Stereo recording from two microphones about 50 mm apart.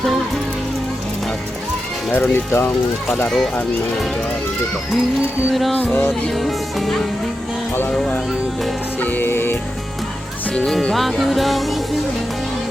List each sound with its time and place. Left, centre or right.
2.1 s speech: left
3.2 s speech: centre
5.7 s music: left
6.3 s music: centre
9.0 s music: left
9.2 s speech: left
10.5 s speech: centre
10.9 s music: centre